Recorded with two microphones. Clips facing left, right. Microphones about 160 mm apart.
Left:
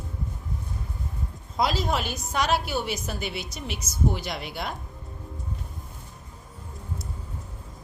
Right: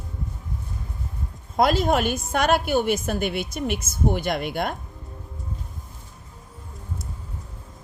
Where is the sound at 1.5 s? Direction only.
55° right (ahead or behind).